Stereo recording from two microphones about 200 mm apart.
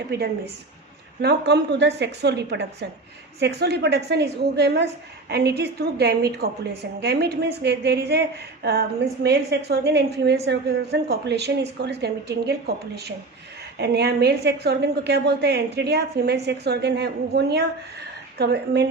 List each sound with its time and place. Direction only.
0.1 s a woman's voice: 55° right (ahead or behind)